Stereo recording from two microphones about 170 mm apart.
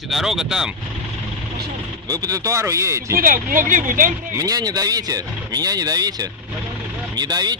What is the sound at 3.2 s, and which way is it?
Speech, 55° right (ahead or behind).